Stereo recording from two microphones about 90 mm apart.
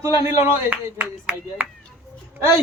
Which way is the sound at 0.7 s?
15° right (ahead or behind).